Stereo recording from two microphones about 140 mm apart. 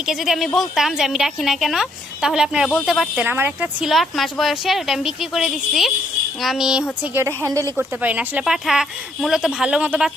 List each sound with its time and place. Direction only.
0.0 s a woman's voice: 5° right (ahead or behind)
3.2 s speech: 15° right (ahead or behind)
3.9 s a woman's voice: centre (ahead or behind)
7.0 s a woman's voice: 15° right (ahead or behind)